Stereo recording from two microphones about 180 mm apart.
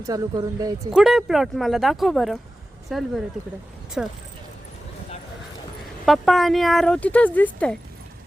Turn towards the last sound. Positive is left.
turn(degrees=10)  # may be behind; listen again after turning